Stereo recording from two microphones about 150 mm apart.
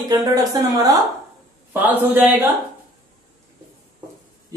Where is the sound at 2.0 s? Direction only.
10° right (ahead or behind).